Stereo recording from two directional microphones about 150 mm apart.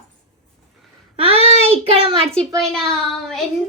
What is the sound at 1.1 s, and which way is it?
A child's voice, 40° right (ahead or behind).